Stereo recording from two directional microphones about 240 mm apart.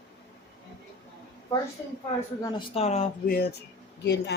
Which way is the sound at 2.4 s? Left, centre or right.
Left.